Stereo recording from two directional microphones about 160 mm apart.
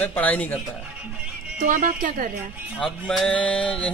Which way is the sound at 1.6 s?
55° right (ahead or behind).